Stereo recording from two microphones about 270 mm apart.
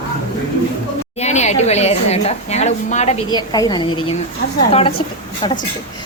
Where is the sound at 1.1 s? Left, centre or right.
Left.